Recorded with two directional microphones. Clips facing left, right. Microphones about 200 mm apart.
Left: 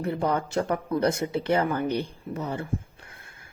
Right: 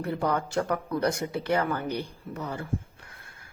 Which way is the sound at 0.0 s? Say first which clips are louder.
Left 2 dB; 25° left (ahead or behind).